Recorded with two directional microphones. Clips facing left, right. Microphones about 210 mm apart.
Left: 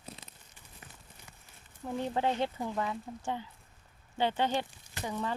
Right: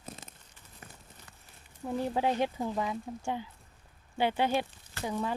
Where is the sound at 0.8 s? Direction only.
45° right (ahead or behind).